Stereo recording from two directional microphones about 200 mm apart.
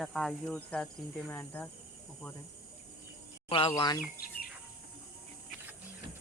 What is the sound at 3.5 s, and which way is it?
Speech, 25° left (ahead or behind).